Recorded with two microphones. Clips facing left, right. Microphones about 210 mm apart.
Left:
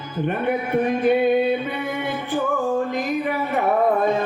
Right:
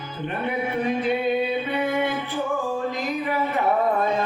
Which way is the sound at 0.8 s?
50° left (ahead or behind).